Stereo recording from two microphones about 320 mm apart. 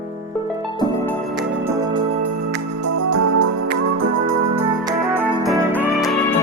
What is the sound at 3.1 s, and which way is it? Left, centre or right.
Organ, right.